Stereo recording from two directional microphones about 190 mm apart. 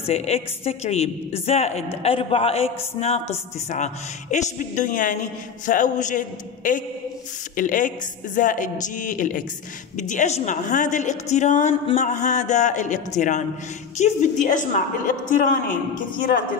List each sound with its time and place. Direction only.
0.0 s a woman's voice: 35° left (ahead or behind)